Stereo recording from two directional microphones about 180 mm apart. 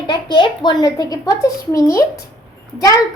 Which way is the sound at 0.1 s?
25° left (ahead or behind).